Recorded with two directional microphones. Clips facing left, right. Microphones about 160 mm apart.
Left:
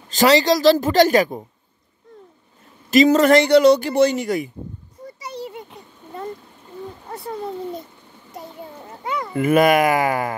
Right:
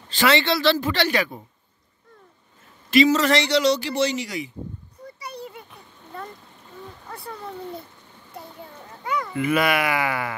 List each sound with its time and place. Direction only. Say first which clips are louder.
0.1 s a woman's voice: left 5 dB; 40° left (ahead or behind)
2.9 s speech: left 5 dB; 45° left (ahead or behind)
5.2 s a sound: left 5 dB; 25° left (ahead or behind)
7.1 s speech: left 7 dB; 30° left (ahead or behind)
8.3 s a sound: left 4 dB; 25° left (ahead or behind)
9.3 s speech: left 7 dB; 45° left (ahead or behind)